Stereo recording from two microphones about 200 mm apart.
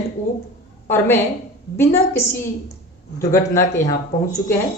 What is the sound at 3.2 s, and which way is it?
Speech, 15° left (ahead or behind).